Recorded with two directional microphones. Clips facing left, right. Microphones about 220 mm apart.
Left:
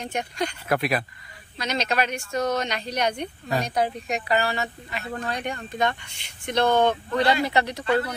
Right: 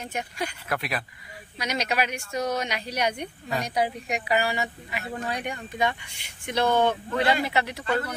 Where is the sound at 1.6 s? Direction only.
10° right (ahead or behind).